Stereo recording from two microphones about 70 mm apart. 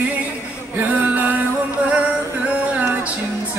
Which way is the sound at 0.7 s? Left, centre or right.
Right.